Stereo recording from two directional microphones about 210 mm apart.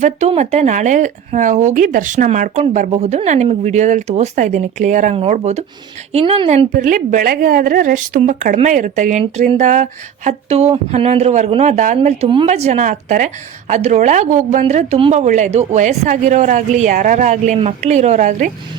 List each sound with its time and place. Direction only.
0.0 s speech: 30° right (ahead or behind)
6.7 s speech: 40° right (ahead or behind)